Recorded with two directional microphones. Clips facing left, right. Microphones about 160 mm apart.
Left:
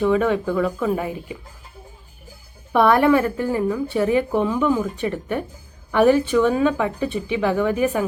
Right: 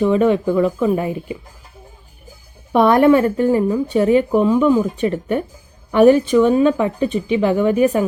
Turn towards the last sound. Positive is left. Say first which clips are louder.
# right 4 dB
turn(degrees=-20)  # may be behind; listen again after turning